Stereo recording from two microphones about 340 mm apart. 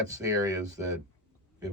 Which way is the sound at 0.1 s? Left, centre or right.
Centre.